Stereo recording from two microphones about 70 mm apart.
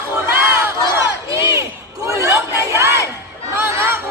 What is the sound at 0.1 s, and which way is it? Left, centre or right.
Battle cry, right.